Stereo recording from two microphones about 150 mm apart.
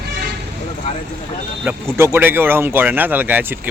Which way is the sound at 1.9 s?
15° right (ahead or behind).